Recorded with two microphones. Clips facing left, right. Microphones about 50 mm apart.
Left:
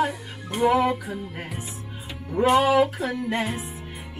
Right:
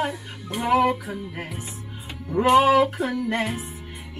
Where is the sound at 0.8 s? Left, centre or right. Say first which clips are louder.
Right 2 dB; centre.